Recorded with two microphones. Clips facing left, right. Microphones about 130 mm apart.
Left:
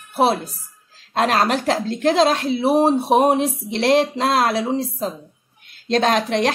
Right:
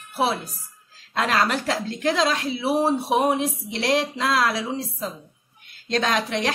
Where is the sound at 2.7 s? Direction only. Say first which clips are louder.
Left 5 dB; 25° left (ahead or behind).